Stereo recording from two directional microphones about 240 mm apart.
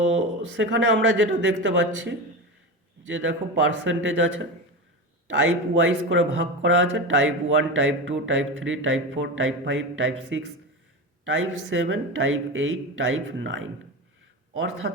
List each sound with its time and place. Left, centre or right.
0.0 s a man's voice: right